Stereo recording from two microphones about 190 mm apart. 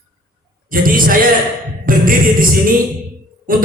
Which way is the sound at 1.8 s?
50° right (ahead or behind).